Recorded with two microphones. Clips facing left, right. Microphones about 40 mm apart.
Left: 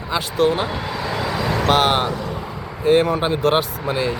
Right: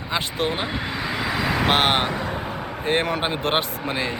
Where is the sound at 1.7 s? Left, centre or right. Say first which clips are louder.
Left 4 dB; right.